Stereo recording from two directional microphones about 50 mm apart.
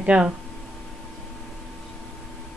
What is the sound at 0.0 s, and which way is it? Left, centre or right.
Speech, right.